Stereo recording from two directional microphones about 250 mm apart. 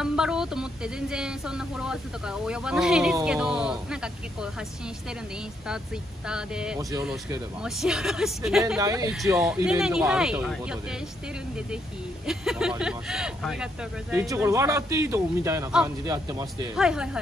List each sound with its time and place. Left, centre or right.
0.0 s speech: centre
6.2 s speech: centre
12.3 s speech: centre
16.7 s speech: centre